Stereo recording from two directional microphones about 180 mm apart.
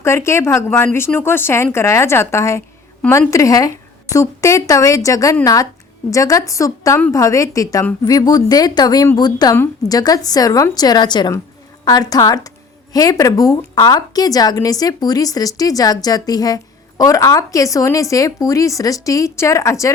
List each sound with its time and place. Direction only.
0.0 s a woman's voice: 15° left (ahead or behind)